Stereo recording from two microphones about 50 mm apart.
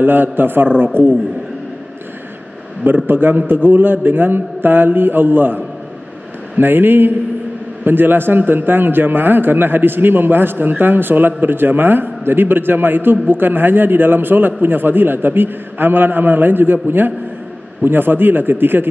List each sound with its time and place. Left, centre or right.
0.0 s a man's voice: right
3.1 s a man's voice: right
6.6 s a man's voice: right